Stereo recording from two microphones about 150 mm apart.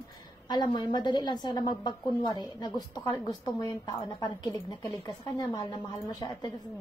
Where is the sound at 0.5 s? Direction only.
30° left (ahead or behind).